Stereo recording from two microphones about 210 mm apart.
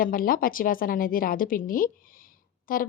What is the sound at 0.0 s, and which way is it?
Speech, 40° left (ahead or behind).